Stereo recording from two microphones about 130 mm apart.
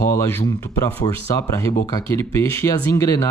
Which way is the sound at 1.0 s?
20° left (ahead or behind).